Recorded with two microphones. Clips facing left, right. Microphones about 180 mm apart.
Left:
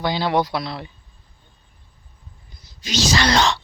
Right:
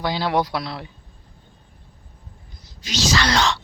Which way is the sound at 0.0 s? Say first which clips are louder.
Left 1 dB; 5° right (ahead or behind).